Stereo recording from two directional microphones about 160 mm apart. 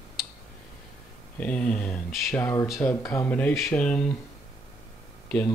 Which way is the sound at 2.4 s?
15° left (ahead or behind).